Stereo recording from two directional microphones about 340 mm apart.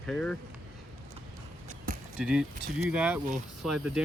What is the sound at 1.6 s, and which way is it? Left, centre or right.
Basketball bounce, right.